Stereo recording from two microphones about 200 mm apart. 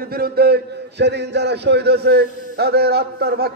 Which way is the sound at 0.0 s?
50° right (ahead or behind).